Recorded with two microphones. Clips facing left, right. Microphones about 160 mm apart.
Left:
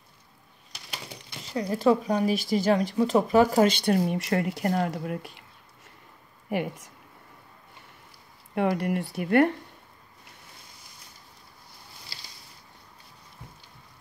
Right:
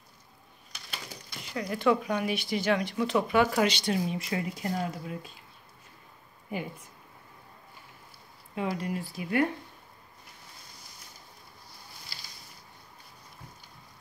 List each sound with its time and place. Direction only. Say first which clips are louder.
1.0 s crumpling: left 2 dB; 30° left (ahead or behind)
2.5 s speech: left 4 dB; 40° left (ahead or behind)
3.8 s speech: left 5 dB; 60° left (ahead or behind)
6.5 s speech: left 7 dB; 70° left (ahead or behind)
8.5 s speech: left 6 dB; 65° left (ahead or behind)